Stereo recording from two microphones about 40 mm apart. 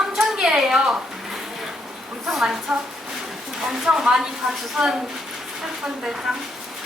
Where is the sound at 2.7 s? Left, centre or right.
Right.